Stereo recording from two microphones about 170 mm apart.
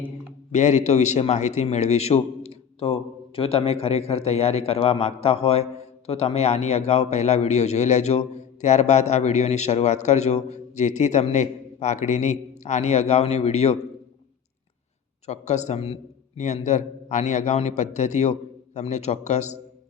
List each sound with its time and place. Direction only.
0.5 s a man's voice: 45° left (ahead or behind)
15.3 s a man's voice: 40° left (ahead or behind)